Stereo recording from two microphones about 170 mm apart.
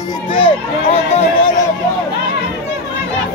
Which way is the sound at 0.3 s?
35° left (ahead or behind).